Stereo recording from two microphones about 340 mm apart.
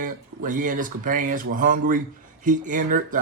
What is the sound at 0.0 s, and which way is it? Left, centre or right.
A man's voice, right.